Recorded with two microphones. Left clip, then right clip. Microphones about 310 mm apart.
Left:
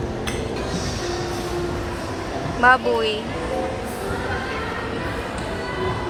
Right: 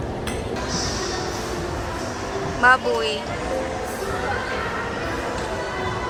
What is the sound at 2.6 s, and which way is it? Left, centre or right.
Speech, centre.